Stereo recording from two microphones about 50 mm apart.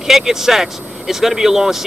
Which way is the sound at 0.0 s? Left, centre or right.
Centre.